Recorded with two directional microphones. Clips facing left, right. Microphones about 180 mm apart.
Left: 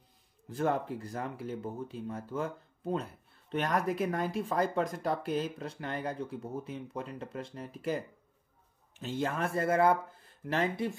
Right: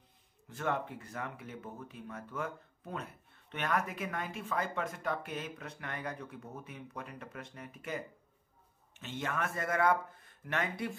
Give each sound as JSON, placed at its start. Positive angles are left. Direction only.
{"t": 0.5, "sound": "speech", "side_deg": 35}